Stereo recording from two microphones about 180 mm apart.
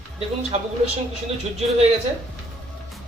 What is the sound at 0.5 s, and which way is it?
Speech, 35° right (ahead or behind).